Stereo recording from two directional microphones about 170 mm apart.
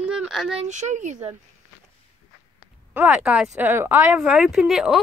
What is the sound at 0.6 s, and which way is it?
Speech, 45° right (ahead or behind).